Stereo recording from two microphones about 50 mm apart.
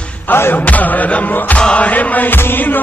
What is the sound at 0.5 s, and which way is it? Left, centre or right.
Music, left.